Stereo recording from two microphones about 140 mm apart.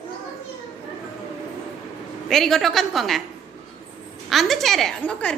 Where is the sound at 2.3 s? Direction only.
Centre (ahead or behind).